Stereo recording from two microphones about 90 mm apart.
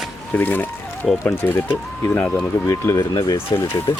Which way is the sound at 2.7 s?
35° left (ahead or behind).